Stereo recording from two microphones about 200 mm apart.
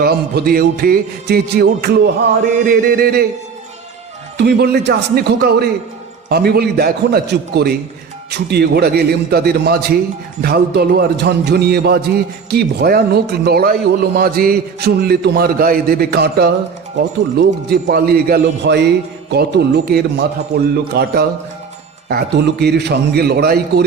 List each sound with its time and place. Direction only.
0.0 s a man's voice: 50° right (ahead or behind)
2.4 s a man's voice: 45° right (ahead or behind)
4.4 s a man's voice: 55° right (ahead or behind)